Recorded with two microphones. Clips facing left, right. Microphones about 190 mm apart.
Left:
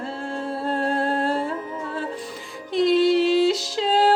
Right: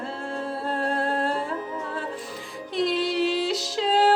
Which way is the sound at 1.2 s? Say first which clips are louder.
Left 3 dB; centre (ahead or behind).